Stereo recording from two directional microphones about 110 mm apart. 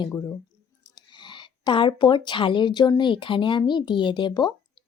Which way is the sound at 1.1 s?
45° left (ahead or behind).